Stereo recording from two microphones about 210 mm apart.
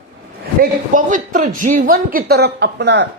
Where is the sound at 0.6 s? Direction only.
40° right (ahead or behind).